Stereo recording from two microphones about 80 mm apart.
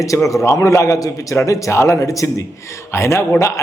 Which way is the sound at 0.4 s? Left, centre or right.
Left.